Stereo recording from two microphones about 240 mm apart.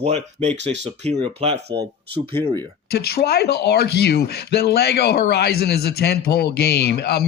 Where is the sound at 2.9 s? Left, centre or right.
Left.